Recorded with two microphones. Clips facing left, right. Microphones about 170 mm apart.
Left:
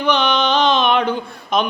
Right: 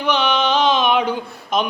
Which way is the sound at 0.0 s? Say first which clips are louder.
Left 1 dB; 5° right (ahead or behind).